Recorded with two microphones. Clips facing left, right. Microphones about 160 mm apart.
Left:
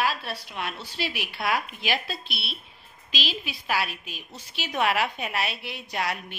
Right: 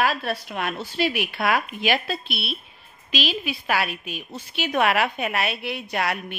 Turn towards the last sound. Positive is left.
turn(degrees=-60)  # may be behind; listen again after turning